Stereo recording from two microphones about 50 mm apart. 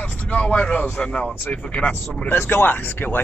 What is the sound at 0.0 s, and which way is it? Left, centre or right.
A man's voice, left.